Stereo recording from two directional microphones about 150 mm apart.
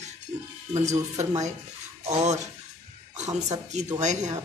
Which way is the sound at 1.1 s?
45° right (ahead or behind).